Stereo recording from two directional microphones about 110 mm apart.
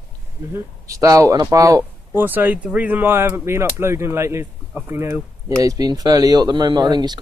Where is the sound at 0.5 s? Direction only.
30° right (ahead or behind).